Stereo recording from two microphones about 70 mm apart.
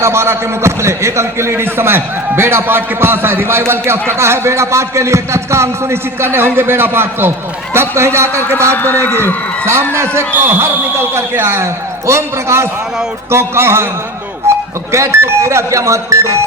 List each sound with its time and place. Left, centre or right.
0.0 s a man's voice: right
8.7 s a man's voice: left
10.2 s a man's voice: right
14.5 s a sound: right
14.9 s speech: right